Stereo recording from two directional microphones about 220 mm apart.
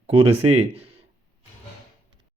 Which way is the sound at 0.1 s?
25° right (ahead or behind).